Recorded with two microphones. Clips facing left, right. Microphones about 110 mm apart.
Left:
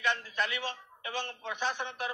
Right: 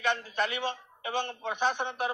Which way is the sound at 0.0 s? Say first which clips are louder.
Right 3 dB; 20° right (ahead or behind).